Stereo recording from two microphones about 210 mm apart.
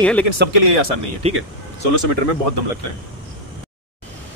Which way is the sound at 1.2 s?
30° right (ahead or behind).